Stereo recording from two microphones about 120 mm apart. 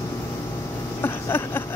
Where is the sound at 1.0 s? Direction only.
20° left (ahead or behind).